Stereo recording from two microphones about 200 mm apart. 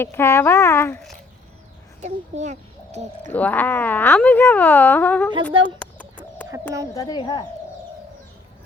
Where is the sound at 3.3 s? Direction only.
10° left (ahead or behind).